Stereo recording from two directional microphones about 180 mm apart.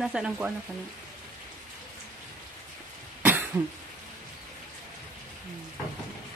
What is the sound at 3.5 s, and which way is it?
Speech, 15° right (ahead or behind).